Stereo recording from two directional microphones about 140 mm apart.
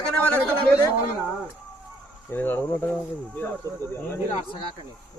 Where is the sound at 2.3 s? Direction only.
15° left (ahead or behind).